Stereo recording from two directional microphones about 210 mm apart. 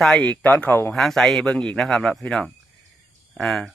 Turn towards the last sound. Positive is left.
turn(degrees=0)  # may be behind; listen again after turning